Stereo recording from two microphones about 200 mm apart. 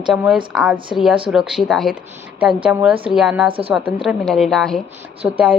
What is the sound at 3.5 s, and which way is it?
Speech, 30° right (ahead or behind).